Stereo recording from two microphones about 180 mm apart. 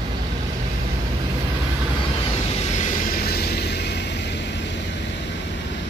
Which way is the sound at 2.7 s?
45° left (ahead or behind).